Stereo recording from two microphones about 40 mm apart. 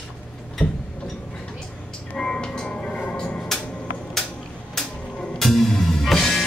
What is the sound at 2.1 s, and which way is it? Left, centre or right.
Music, centre.